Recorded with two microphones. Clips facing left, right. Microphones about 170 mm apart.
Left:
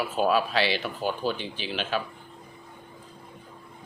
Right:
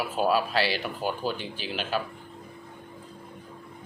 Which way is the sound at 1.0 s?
45° right (ahead or behind).